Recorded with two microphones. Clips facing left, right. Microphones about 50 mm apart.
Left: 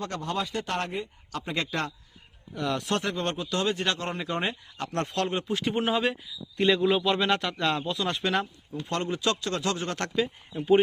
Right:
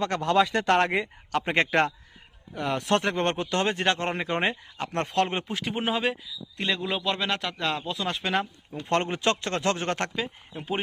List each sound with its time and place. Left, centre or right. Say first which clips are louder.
0.0 s speech: right 6 dB; right
0.3 s speech: right 10 dB; right
1.3 s speech: right 8 dB; right
2.6 s speech: right 1 dB; right
2.8 s speech: right 4 dB; right
5.5 s a man's voice: left 2 dB; centre
8.8 s speech: right 3 dB; right